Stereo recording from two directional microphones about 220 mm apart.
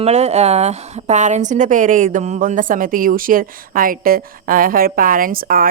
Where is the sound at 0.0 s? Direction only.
30° right (ahead or behind).